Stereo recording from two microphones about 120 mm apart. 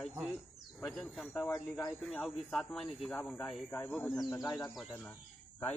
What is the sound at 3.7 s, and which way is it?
Speech, 15° left (ahead or behind).